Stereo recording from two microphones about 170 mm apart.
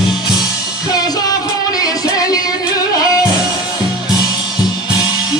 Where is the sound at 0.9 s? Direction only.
20° left (ahead or behind).